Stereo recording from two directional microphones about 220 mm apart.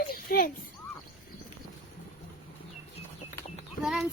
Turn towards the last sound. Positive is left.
turn(degrees=0)  # may be behind; listen again after turning